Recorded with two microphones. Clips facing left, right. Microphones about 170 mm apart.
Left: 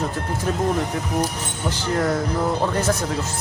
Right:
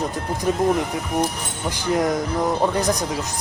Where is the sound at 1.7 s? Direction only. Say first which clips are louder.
Right 1 dB; 15° right (ahead or behind).